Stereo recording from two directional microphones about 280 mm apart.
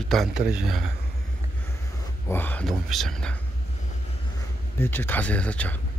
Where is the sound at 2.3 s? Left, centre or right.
Centre.